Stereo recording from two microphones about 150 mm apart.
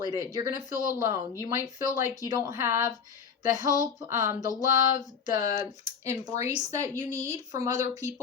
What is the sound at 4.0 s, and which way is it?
Speech, 25° right (ahead or behind).